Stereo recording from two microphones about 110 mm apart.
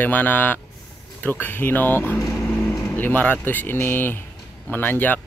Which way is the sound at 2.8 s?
15° left (ahead or behind).